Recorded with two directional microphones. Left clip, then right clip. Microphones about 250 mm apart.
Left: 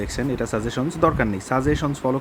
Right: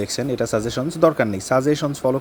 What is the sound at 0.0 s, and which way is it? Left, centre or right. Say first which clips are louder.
Speech: right 3 dB; centre.